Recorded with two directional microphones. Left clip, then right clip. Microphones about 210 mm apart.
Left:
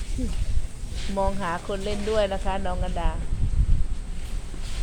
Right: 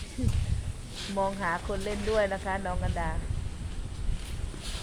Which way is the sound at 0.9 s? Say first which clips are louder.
Left 3 dB; centre (ahead or behind).